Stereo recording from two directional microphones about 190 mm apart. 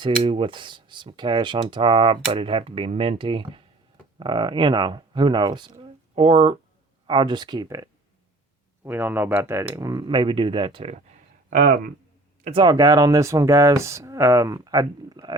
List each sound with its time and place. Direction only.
0.0 s speech: 25° right (ahead or behind)
11.5 s speech: 45° right (ahead or behind)
12.5 s speech: 25° right (ahead or behind)